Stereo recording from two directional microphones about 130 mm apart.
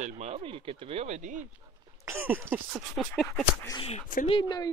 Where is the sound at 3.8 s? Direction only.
55° left (ahead or behind).